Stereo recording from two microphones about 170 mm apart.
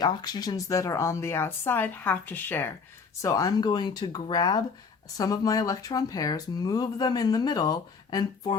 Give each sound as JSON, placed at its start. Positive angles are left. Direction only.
{"t": 0.0, "sound": "speech", "side_deg": 25}